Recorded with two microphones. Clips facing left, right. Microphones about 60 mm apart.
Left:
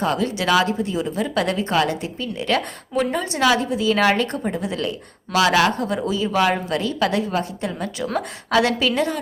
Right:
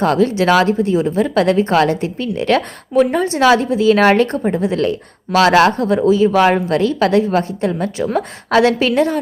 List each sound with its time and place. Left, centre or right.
0.0 s speech: right
0.3 s a woman's voice: right
4.4 s a woman's voice: right
4.8 s a woman's voice: right